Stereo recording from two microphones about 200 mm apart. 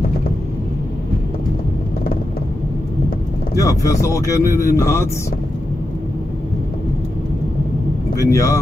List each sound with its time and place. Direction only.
3.5 s speech: 15° left (ahead or behind)
8.2 s speech: 15° left (ahead or behind)